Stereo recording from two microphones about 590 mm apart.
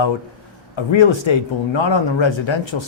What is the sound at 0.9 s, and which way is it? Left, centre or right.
Speech, left.